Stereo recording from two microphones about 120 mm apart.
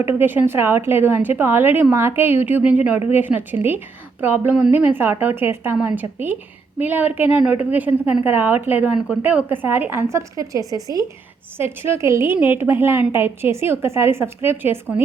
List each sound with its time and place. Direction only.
0.0 s a woman's voice: 15° right (ahead or behind)